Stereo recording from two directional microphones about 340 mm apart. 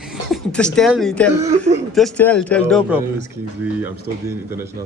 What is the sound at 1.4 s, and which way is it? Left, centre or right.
Speech, centre.